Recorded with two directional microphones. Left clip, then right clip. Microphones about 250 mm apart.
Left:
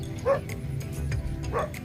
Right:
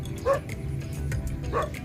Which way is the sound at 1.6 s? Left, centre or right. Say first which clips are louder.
Right 1 dB; right.